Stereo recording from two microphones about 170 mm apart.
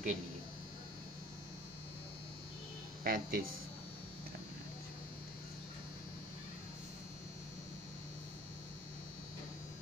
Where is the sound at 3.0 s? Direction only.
60° right (ahead or behind).